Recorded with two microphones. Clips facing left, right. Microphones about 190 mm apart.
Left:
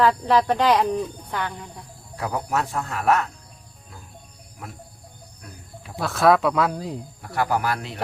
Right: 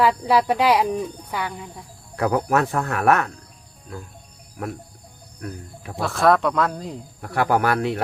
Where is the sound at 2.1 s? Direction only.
60° right (ahead or behind).